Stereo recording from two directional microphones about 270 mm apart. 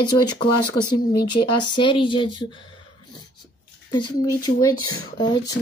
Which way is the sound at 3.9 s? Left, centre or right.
Centre.